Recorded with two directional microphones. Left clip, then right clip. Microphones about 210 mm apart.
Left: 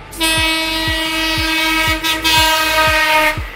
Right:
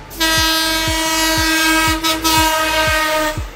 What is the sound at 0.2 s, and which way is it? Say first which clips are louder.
Train: even; 35° right (ahead or behind).